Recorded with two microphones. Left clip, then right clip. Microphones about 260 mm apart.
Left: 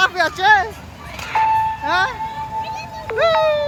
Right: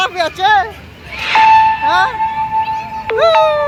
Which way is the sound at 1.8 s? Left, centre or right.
Centre.